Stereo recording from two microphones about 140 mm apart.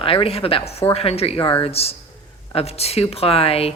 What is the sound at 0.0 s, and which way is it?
Speech, 40° left (ahead or behind).